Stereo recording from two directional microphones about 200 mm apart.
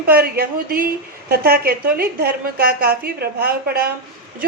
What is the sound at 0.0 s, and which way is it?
A woman's voice, 50° right (ahead or behind).